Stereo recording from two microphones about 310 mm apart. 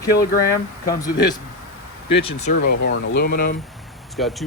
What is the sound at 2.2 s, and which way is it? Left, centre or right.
Speech, centre.